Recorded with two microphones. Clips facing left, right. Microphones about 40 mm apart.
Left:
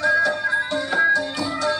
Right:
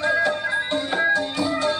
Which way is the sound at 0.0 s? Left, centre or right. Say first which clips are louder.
Left 2 dB; right.